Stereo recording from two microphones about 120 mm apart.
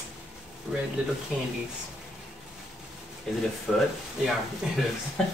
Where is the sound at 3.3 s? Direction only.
5° left (ahead or behind).